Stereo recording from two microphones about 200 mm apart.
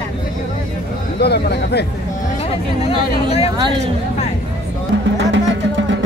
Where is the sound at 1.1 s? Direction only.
55° left (ahead or behind).